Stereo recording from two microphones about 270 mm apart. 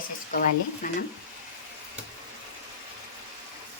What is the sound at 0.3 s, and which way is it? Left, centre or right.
Speech, left.